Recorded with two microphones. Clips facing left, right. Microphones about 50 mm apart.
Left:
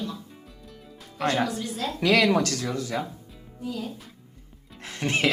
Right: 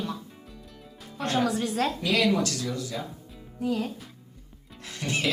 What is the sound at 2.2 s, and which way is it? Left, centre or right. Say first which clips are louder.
Speech: left 2 dB; left.